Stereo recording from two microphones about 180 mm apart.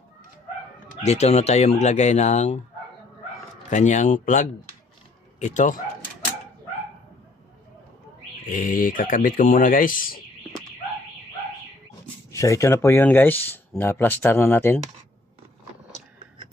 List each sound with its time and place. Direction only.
1.0 s speech: 40° left (ahead or behind)
3.7 s speech: 40° left (ahead or behind)
8.5 s speech: 50° left (ahead or behind)
12.3 s speech: 15° left (ahead or behind)